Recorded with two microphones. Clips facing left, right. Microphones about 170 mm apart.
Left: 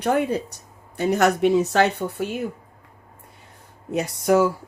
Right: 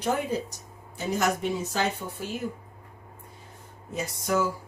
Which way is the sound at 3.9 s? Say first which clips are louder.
Left 8 dB; 65° left (ahead or behind).